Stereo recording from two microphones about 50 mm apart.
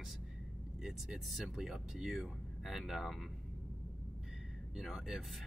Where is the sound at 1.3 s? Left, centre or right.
Centre.